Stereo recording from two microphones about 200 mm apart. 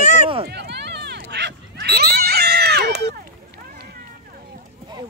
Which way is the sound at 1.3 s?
55° right (ahead or behind).